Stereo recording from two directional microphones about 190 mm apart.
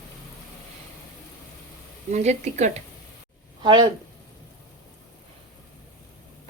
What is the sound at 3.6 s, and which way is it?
Speech, 20° right (ahead or behind).